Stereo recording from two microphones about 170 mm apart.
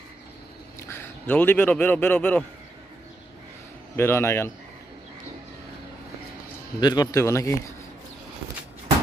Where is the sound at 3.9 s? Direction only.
15° left (ahead or behind).